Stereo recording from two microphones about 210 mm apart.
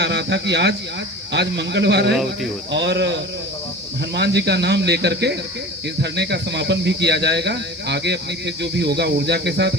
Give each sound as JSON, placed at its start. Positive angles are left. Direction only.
{"t": 0.0, "sound": "a man's voice", "side_deg": -55}